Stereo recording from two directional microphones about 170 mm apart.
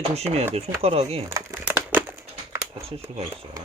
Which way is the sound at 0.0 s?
40° right (ahead or behind).